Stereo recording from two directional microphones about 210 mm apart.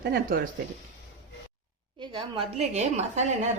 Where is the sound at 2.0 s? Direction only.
25° right (ahead or behind).